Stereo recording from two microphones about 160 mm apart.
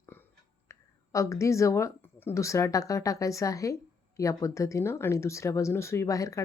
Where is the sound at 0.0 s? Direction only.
15° left (ahead or behind).